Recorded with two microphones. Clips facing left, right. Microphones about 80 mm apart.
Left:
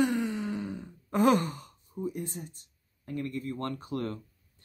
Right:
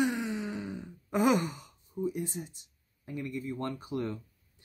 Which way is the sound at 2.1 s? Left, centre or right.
Centre.